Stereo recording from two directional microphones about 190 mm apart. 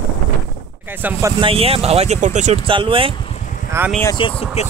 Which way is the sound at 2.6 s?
25° right (ahead or behind).